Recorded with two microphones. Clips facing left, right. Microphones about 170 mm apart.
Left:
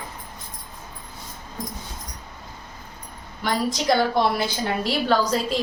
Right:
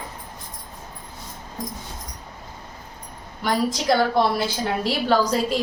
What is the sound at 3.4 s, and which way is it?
A woman's voice, 5° right (ahead or behind).